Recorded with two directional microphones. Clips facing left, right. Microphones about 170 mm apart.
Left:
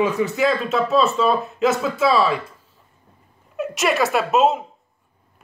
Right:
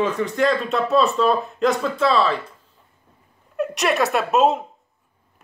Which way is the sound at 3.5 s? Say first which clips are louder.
Even; centre (ahead or behind).